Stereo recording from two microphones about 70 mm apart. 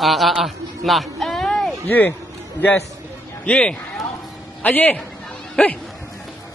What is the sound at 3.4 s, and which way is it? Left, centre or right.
A man's voice, centre.